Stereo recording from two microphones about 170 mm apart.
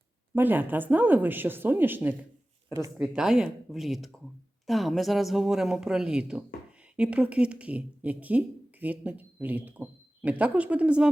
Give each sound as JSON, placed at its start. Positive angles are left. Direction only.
{"t": 0.3, "sound": "a woman's voice", "side_deg": -10}
{"t": 3.2, "sound": "a woman's voice", "side_deg": -5}